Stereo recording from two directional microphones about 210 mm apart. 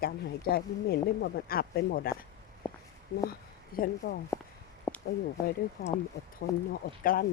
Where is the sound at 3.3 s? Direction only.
45° left (ahead or behind).